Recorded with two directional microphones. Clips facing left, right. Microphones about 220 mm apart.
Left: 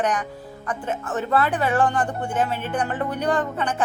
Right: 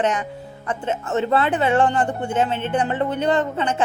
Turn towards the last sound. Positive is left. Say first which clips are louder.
# right 3 dB
turn(degrees=-25)  # may be behind; listen again after turning